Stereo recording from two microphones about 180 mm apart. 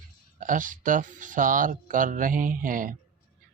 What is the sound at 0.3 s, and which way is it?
Speech, 45° right (ahead or behind).